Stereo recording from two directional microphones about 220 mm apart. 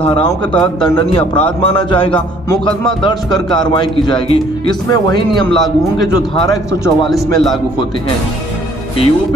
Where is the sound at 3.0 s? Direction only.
20° left (ahead or behind).